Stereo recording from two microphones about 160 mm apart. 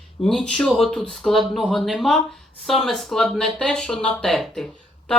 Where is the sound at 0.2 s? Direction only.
5° left (ahead or behind).